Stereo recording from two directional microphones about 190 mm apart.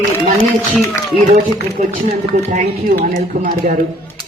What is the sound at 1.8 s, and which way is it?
A man's voice, 40° right (ahead or behind).